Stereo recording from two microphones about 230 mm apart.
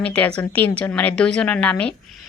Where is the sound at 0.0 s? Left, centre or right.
Centre.